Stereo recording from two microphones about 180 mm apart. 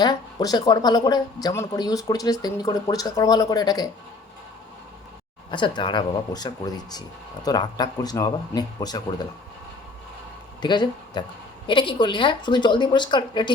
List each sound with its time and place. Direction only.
0.0 s speech: 20° left (ahead or behind)
5.5 s speech: 25° left (ahead or behind)
10.6 s speech: 25° left (ahead or behind)